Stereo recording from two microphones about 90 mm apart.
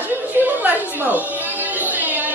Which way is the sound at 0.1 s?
20° right (ahead or behind).